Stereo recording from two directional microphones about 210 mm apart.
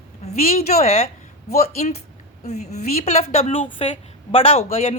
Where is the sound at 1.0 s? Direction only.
45° left (ahead or behind).